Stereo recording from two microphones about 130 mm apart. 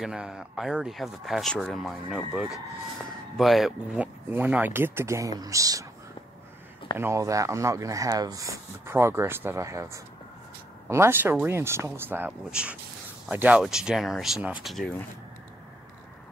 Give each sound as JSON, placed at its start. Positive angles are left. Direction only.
{"t": 0.0, "sound": "speech", "side_deg": -5}
{"t": 7.0, "sound": "speech", "side_deg": -20}